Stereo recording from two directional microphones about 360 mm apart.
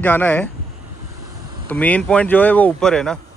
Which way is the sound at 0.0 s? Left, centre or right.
Centre.